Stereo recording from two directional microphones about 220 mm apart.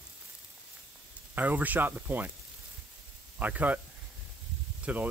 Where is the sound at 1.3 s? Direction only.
5° right (ahead or behind).